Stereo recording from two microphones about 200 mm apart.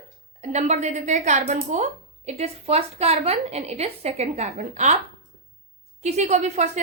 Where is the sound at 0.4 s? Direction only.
35° right (ahead or behind).